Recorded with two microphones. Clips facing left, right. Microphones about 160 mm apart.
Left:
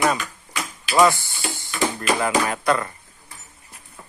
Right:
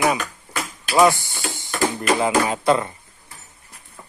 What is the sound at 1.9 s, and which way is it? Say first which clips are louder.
Music: right 3 dB; 20° right (ahead or behind).